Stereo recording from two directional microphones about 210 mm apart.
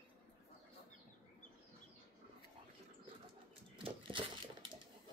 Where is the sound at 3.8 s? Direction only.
25° right (ahead or behind).